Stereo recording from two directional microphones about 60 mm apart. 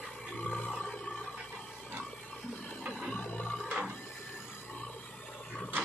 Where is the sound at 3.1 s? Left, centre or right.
Left.